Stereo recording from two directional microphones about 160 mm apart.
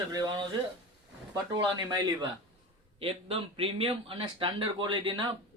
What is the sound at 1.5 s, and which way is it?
Speech, 30° right (ahead or behind).